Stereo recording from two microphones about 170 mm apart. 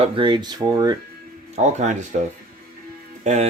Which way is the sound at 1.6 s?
45° right (ahead or behind).